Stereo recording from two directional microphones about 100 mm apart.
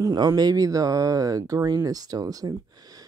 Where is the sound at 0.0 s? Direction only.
40° right (ahead or behind).